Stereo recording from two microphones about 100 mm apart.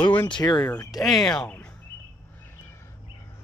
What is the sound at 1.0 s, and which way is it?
Speech, centre (ahead or behind).